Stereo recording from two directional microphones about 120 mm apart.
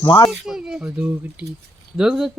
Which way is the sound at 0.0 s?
40° left (ahead or behind).